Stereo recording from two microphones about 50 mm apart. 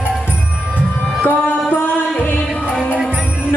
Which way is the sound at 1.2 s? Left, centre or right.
Left.